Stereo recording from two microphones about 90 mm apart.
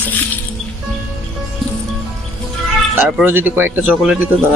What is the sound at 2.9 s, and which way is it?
Speech, 20° right (ahead or behind).